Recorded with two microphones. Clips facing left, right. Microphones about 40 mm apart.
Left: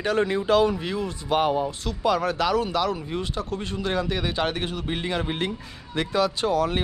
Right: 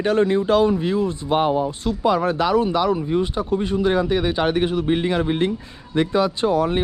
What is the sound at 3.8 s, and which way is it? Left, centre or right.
Speech, right.